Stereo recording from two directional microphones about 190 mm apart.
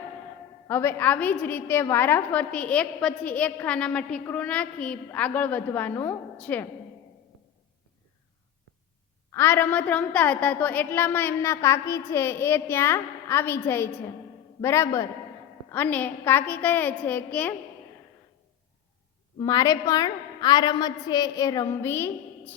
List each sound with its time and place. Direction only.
0.7 s a woman's voice: 10° left (ahead or behind)
9.3 s a woman's voice: 10° left (ahead or behind)
19.4 s a woman's voice: 20° left (ahead or behind)